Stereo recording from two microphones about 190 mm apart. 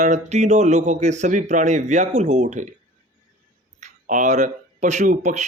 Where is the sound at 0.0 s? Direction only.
40° right (ahead or behind).